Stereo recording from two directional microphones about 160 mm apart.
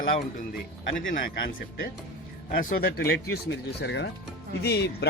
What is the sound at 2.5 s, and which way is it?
A man's voice, 70° left (ahead or behind).